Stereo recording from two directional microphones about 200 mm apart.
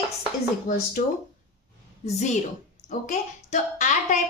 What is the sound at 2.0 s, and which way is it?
A woman's voice, 35° left (ahead or behind).